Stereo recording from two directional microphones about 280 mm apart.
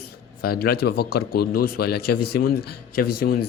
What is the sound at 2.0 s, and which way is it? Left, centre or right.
Speech, left.